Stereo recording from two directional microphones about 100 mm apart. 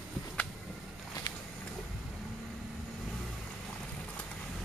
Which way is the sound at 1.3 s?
45° left (ahead or behind).